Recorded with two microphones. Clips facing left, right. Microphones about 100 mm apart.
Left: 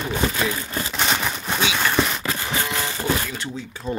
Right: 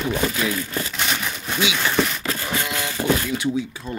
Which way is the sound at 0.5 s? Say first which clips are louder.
Right 1 dB; 25° left (ahead or behind).